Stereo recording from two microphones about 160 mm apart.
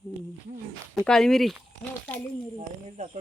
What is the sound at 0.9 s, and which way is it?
Speech, 5° left (ahead or behind).